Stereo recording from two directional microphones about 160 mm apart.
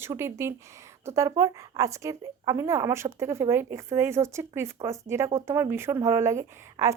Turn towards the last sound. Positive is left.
turn(degrees=-20)  # may be behind; listen again after turning